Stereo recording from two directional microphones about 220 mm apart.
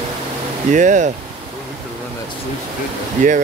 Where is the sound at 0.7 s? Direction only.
35° right (ahead or behind).